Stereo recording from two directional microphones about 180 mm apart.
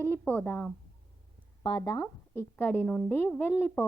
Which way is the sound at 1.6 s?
20° left (ahead or behind).